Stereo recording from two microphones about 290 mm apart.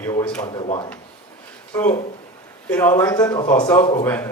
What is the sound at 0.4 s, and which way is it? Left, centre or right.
Speech, centre.